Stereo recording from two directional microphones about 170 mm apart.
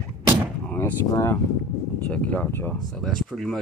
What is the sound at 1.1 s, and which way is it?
Speech, 20° left (ahead or behind).